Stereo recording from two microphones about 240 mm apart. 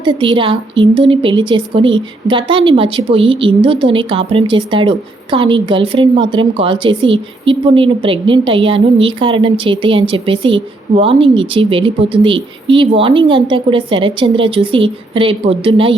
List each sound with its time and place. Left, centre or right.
0.0 s speech: centre